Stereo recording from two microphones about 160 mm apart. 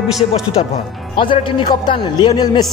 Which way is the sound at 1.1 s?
30° left (ahead or behind).